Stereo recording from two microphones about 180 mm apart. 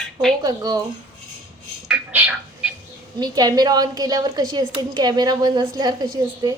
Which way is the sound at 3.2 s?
20° right (ahead or behind).